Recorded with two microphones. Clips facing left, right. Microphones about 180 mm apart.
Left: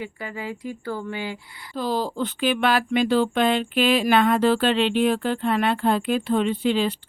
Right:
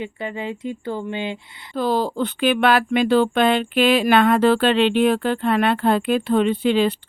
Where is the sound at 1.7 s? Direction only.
60° right (ahead or behind).